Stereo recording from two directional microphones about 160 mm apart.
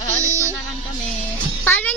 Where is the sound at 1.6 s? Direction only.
15° left (ahead or behind).